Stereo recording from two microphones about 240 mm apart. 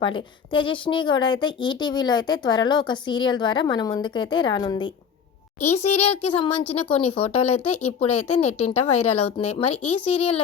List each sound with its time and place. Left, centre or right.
0.0 s speech: left
5.5 s speech: left
5.8 s speech: left
7.4 s speech: left
9.4 s speech: left
9.8 s speech: left